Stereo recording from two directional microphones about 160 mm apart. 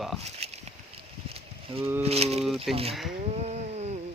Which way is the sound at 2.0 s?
40° right (ahead or behind).